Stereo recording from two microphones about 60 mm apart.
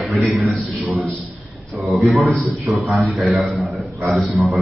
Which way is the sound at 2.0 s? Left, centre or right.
Centre.